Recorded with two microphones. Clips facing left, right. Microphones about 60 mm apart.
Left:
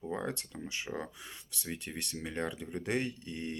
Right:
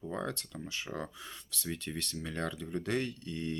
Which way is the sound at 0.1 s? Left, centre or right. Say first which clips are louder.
Left 1 dB; centre.